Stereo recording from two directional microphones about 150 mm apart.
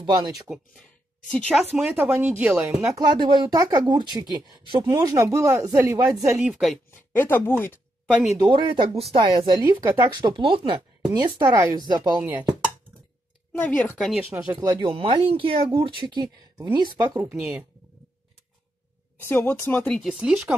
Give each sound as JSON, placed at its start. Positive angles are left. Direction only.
{"t": 0.0, "sound": "speech", "side_deg": -25}
{"t": 1.3, "sound": "speech", "side_deg": 5}
{"t": 1.6, "sound": "speech", "side_deg": -10}
{"t": 3.0, "sound": "speech", "side_deg": -30}
{"t": 4.9, "sound": "speech", "side_deg": -20}
{"t": 6.5, "sound": "speech", "side_deg": 0}
{"t": 6.9, "sound": "speech", "side_deg": 15}
{"t": 8.4, "sound": "speech", "side_deg": -30}
{"t": 12.3, "sound": "drum", "side_deg": -15}
{"t": 13.5, "sound": "speech", "side_deg": 10}
{"t": 14.6, "sound": "speech", "side_deg": -30}
{"t": 17.3, "sound": "speech", "side_deg": -5}
{"t": 19.2, "sound": "speech", "side_deg": 15}
{"t": 20.2, "sound": "speech", "side_deg": -5}